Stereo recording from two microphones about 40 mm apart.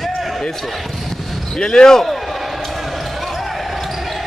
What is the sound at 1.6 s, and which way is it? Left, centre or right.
Speech, centre.